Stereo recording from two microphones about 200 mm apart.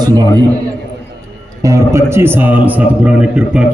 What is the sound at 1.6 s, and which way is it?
A man's voice, 15° right (ahead or behind).